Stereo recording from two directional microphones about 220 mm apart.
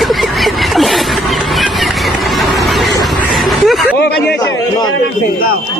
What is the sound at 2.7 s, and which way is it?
Music, centre (ahead or behind).